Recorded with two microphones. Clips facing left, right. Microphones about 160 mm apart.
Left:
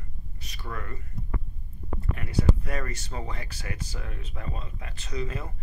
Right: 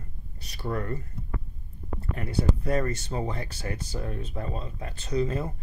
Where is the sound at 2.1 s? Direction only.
30° right (ahead or behind).